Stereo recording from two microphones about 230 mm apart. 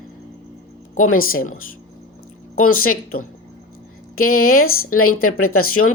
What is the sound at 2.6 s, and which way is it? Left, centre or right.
A woman's voice, left.